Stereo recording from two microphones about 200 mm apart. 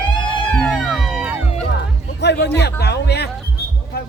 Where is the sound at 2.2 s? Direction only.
60° left (ahead or behind).